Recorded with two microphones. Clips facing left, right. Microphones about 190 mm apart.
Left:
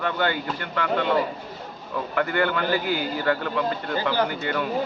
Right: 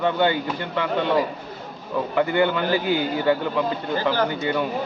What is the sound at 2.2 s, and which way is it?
A man's voice, 20° right (ahead or behind).